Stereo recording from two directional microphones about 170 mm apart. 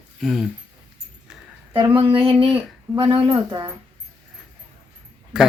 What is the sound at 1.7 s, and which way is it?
Speech, 30° right (ahead or behind).